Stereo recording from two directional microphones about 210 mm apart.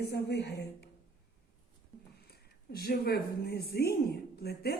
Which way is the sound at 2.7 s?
50° left (ahead or behind).